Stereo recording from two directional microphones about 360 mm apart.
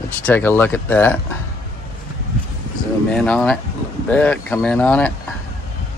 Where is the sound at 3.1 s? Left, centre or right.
Centre.